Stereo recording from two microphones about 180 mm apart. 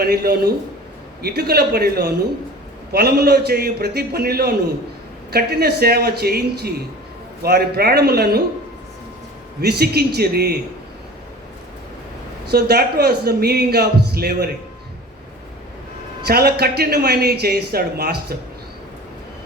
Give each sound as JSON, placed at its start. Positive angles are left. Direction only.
{"t": 0.0, "sound": "speech", "side_deg": -60}
{"t": 9.6, "sound": "speech", "side_deg": -60}
{"t": 12.5, "sound": "speech", "side_deg": -60}
{"t": 16.2, "sound": "speech", "side_deg": -60}